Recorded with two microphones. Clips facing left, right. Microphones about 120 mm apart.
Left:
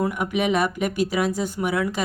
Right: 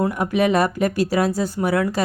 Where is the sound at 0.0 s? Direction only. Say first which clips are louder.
Right 4 dB; 35° right (ahead or behind).